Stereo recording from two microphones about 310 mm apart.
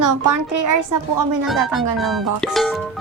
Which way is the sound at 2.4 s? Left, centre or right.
Centre.